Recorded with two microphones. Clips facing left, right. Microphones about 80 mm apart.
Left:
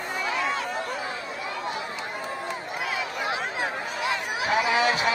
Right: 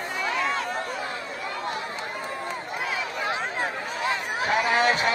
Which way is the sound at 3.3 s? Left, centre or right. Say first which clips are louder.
Right 1 dB; right.